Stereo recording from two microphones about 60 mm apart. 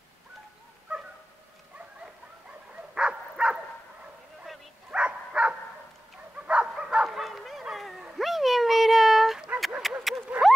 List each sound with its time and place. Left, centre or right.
2.9 s dog: centre
4.9 s dog: centre
7.1 s bow-wow: centre
8.2 s dog: centre
9.8 s a sound: centre
10.3 s a sound: right